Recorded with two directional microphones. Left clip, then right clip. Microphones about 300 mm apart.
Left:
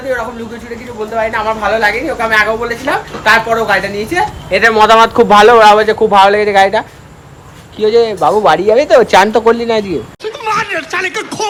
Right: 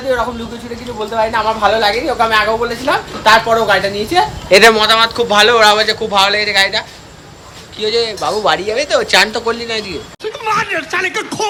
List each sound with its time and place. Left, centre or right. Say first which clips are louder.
1.1 s a woman's voice: even; centre
4.4 s speech: right 4 dB; right
4.7 s speech: left 5 dB; centre